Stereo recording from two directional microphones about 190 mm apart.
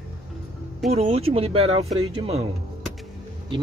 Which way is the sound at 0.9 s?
35° right (ahead or behind).